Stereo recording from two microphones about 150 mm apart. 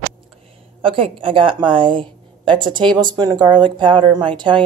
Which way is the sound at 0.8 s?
35° right (ahead or behind).